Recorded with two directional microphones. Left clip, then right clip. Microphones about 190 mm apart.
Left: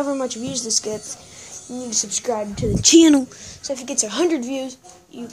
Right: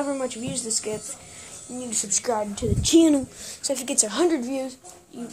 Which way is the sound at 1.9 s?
20° left (ahead or behind).